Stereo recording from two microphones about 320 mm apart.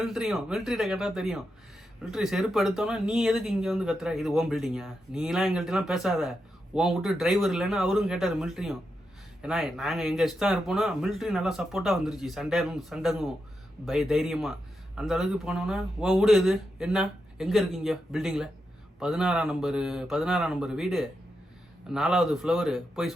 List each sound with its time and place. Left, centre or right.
0.0 s speech: centre